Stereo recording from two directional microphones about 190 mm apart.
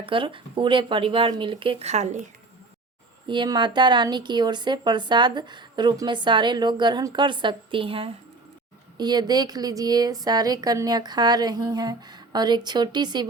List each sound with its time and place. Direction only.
0.0 s speech: 25° right (ahead or behind)
3.2 s speech: 25° right (ahead or behind)